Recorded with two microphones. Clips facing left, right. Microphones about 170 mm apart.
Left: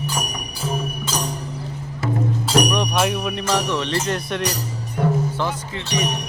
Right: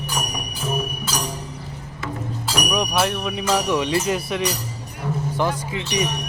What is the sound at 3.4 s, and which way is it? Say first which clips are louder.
Music: right 3 dB; 10° right (ahead or behind).